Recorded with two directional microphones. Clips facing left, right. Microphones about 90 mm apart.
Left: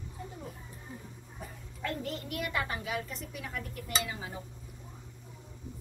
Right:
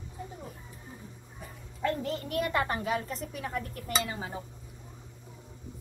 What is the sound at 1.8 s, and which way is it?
Speech, 30° right (ahead or behind).